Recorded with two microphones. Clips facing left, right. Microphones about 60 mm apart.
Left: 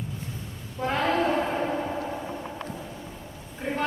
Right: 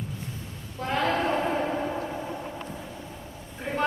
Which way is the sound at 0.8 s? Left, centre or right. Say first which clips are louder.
Left 1 dB; centre.